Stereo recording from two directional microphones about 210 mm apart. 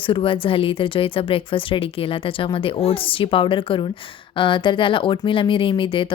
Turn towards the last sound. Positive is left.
turn(degrees=25)  # may be behind; listen again after turning